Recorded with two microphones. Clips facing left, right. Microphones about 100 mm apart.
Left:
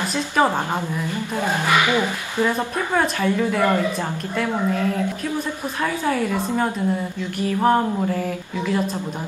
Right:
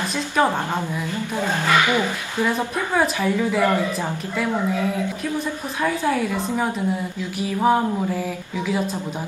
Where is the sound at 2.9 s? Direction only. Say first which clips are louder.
Even; 5° right (ahead or behind).